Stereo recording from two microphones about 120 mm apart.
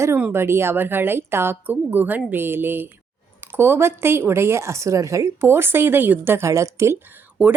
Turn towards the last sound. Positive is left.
turn(degrees=-15)  # may be behind; listen again after turning